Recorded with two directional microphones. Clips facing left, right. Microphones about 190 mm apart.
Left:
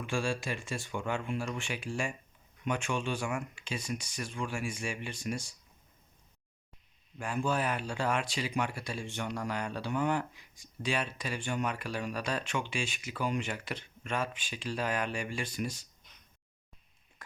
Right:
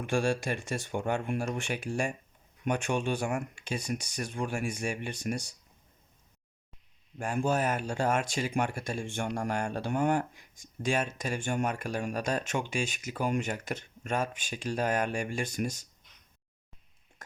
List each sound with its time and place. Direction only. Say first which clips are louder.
0.0 s speech: right 4 dB; 45° right (ahead or behind)
7.2 s speech: right 3 dB; 45° right (ahead or behind)